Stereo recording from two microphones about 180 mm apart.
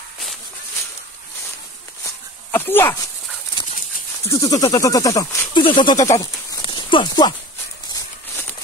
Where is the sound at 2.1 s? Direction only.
10° left (ahead or behind).